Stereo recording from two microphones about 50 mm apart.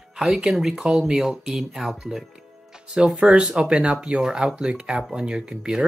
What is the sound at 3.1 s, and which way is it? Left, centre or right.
Speech, centre.